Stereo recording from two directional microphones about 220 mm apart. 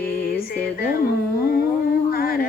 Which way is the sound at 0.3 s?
45° left (ahead or behind).